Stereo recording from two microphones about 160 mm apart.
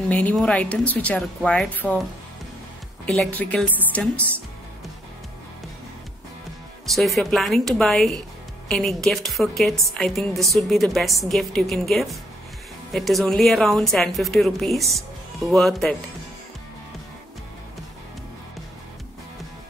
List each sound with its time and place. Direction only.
0.1 s speech: 10° left (ahead or behind)
3.1 s speech: 5° left (ahead or behind)
6.9 s a woman's voice: centre (ahead or behind)